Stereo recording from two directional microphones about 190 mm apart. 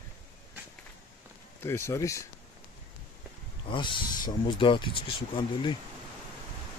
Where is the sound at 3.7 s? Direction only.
25° left (ahead or behind).